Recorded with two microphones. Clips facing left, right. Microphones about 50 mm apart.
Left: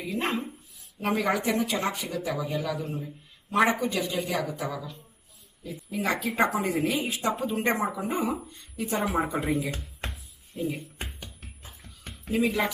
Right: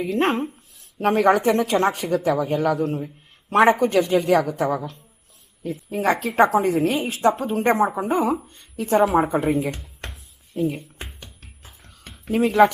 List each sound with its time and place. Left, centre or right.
0.0 s a woman's voice: right
9.7 s a sound: centre
10.8 s music: centre
12.3 s speech: right